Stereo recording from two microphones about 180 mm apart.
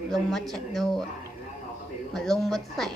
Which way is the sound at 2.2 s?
Centre (ahead or behind).